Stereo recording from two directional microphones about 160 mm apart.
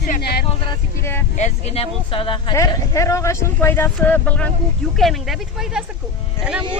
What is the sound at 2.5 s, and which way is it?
Speech, 20° left (ahead or behind).